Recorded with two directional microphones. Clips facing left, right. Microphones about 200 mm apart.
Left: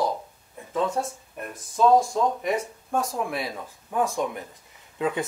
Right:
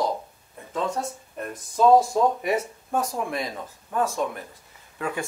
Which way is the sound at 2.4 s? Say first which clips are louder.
Right 1 dB; 5° right (ahead or behind).